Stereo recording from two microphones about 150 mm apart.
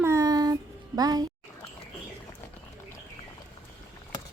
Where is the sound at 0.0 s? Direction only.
20° right (ahead or behind).